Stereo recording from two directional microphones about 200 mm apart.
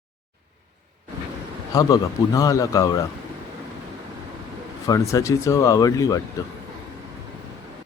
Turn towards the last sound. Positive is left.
turn(degrees=15)  # may be behind; listen again after turning